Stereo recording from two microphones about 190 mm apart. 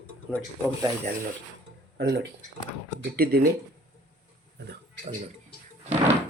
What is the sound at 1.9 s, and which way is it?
Speech, 65° right (ahead or behind).